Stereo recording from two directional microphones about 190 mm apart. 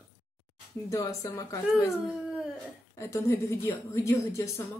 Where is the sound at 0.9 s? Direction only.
15° left (ahead or behind).